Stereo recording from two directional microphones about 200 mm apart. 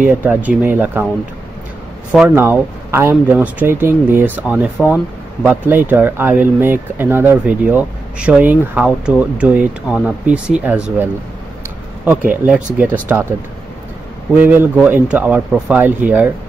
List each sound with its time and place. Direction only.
0.0 s speech: 10° right (ahead or behind)
2.1 s a man's voice: 10° right (ahead or behind)
14.3 s speech: 10° right (ahead or behind)